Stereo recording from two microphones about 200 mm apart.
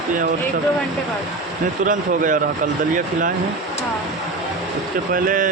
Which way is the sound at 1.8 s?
40° right (ahead or behind).